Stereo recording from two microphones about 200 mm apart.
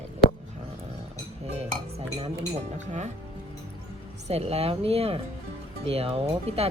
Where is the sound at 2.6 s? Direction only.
35° right (ahead or behind).